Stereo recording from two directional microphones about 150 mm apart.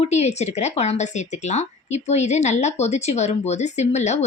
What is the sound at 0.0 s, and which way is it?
Speech, 45° left (ahead or behind).